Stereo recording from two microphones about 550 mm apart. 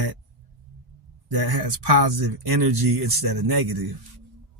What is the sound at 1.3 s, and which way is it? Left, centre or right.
Speech, right.